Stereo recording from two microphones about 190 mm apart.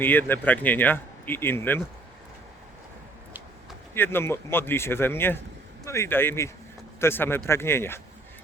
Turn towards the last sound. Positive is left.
turn(degrees=10)  # may be behind; listen again after turning